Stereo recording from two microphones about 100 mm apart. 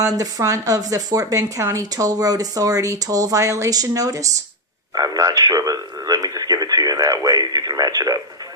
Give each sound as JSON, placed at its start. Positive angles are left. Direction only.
{"t": 0.0, "sound": "speech", "side_deg": -35}
{"t": 4.9, "sound": "radio", "side_deg": -35}